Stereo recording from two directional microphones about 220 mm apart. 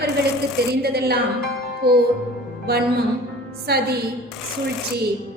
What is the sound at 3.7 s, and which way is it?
Speech, 45° right (ahead or behind).